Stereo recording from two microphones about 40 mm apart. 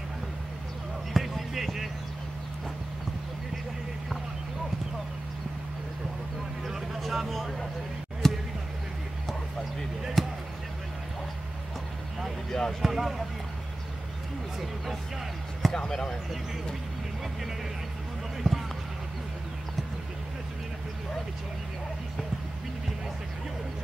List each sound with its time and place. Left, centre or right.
1.1 s basketball bounce: centre
6.7 s vehicle: centre
8.2 s basketball bounce: centre
10.2 s basketball bounce: centre
12.4 s a sound: centre
12.8 s speech: centre
15.7 s speech: centre
18.4 s basketball bounce: centre